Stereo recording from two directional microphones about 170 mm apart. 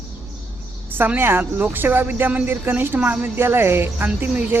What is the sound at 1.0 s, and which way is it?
Speech, 10° right (ahead or behind).